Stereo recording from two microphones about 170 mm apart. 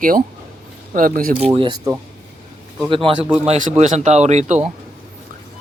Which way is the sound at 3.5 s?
45° right (ahead or behind).